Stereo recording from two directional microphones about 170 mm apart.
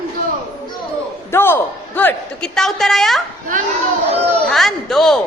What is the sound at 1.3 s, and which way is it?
A man's voice, 15° left (ahead or behind).